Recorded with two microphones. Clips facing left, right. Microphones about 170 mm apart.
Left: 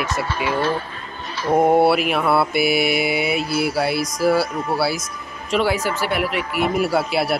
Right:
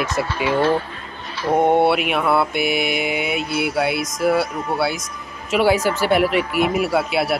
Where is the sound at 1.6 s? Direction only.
5° left (ahead or behind).